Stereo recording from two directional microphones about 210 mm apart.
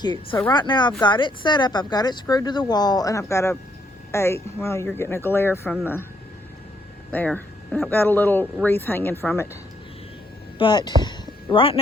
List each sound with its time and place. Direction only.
0.0 s speech: 20° left (ahead or behind)
7.1 s speech: 10° left (ahead or behind)
10.6 s speech: 20° left (ahead or behind)